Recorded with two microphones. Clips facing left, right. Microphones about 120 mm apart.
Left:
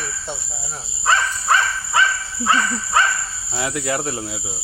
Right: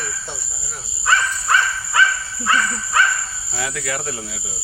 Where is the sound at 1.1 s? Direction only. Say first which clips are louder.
Left 1 dB; 25° left (ahead or behind).